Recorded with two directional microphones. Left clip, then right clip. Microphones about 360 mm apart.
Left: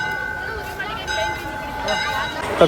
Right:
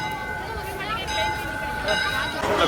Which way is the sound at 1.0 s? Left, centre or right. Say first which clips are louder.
Left 3 dB; left.